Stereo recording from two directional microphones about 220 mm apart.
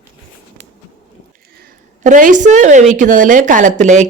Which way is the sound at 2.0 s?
35° right (ahead or behind).